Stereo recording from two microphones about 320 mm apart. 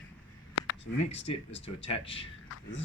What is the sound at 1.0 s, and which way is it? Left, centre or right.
Speech, centre.